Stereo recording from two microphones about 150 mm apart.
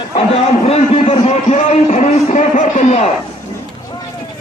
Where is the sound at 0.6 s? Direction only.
45° left (ahead or behind).